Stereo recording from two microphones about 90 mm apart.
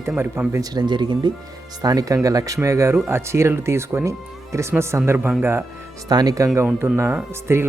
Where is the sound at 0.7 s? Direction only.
55° right (ahead or behind).